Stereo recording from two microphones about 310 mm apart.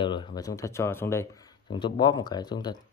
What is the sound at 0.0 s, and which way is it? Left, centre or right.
Speech, centre.